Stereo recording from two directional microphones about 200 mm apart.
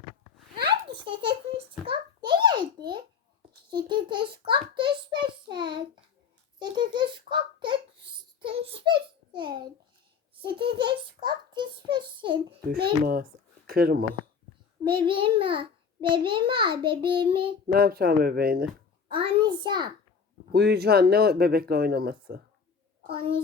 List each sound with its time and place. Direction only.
0.9 s a child's voice: 25° right (ahead or behind)
1.9 s a sound: 25° right (ahead or behind)
3.8 s a child's voice: 25° right (ahead or behind)
4.7 s a sound: 25° right (ahead or behind)
5.5 s child singing: 20° right (ahead or behind)
6.6 s a sound: 20° right (ahead or behind)
10.4 s a child's voice: 25° right (ahead or behind)
12.7 s speech: 50° right (ahead or behind)
15.0 s a child's voice: 25° right (ahead or behind)
17.7 s speech: 50° right (ahead or behind)
19.0 s a child's voice: 25° right (ahead or behind)
20.5 s speech: 55° right (ahead or behind)
23.0 s a child's voice: 25° right (ahead or behind)